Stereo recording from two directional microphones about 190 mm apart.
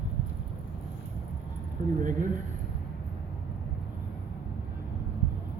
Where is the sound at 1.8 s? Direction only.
40° right (ahead or behind).